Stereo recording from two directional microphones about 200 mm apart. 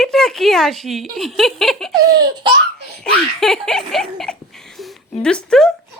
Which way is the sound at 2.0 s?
20° right (ahead or behind).